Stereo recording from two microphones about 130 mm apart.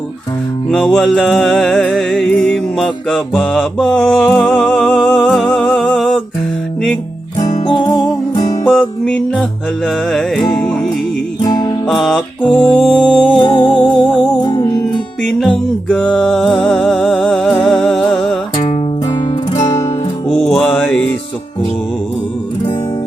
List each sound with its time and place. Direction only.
0.7 s music: 5° left (ahead or behind)
7.6 s music: 40° left (ahead or behind)
8.6 s music: 10° left (ahead or behind)
11.4 s music: 30° left (ahead or behind)
11.9 s music: 5° left (ahead or behind)
13.4 s music: 40° left (ahead or behind)
15.3 s music: 5° left (ahead or behind)
18.5 s music: 40° left (ahead or behind)
20.2 s music: 50° left (ahead or behind)
20.5 s mantra: 10° left (ahead or behind)